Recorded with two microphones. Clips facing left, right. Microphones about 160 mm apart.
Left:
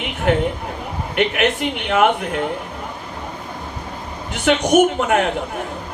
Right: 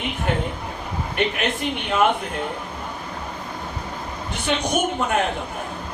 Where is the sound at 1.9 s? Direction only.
80° left.